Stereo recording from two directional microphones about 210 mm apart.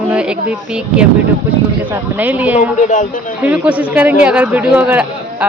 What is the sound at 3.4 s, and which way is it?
A man's voice, 5° right (ahead or behind).